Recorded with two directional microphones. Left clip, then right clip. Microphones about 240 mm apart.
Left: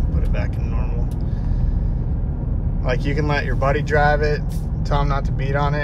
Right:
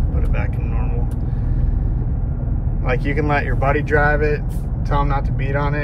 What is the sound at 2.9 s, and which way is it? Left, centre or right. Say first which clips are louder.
Speech: right 3 dB; centre.